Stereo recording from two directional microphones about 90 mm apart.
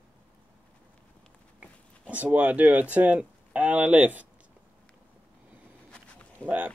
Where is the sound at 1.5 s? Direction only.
15° right (ahead or behind).